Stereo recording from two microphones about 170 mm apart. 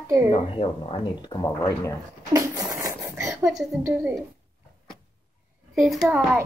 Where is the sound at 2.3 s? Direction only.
20° right (ahead or behind).